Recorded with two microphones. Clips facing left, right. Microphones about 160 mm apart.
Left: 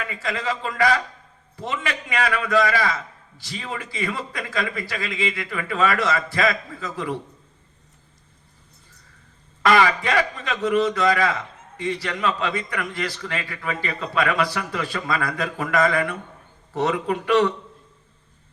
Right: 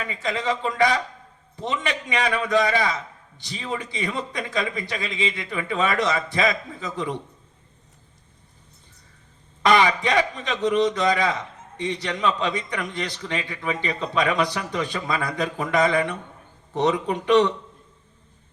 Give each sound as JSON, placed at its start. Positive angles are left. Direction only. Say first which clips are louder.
{"t": 0.1, "sound": "a man's voice", "louder": "right 4 dB", "side_deg": -20}
{"t": 9.6, "sound": "a man's voice", "louder": "even", "side_deg": -20}